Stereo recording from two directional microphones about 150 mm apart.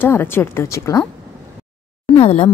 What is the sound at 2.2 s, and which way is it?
Speech, 40° left (ahead or behind).